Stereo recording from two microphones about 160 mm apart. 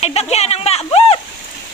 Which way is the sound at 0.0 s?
40° left (ahead or behind).